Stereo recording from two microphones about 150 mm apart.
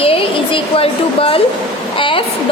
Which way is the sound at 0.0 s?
40° left (ahead or behind).